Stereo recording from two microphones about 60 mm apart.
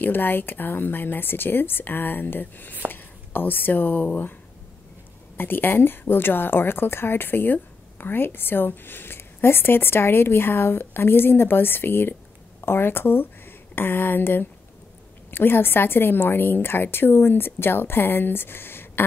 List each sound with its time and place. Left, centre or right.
0.0 s a woman's voice: left
5.4 s a woman's voice: left